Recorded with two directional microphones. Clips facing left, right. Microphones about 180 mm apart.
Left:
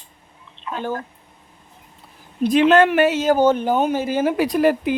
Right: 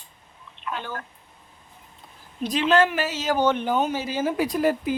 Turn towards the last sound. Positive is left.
turn(degrees=70)  # may be behind; listen again after turning